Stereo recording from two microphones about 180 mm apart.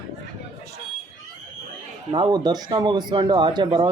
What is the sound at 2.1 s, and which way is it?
Speech, 25° right (ahead or behind).